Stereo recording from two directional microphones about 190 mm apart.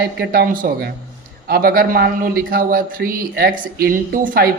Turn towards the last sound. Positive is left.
turn(degrees=-45)  # may be behind; listen again after turning